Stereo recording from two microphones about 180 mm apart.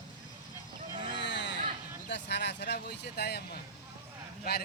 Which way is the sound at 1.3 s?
75° left (ahead or behind).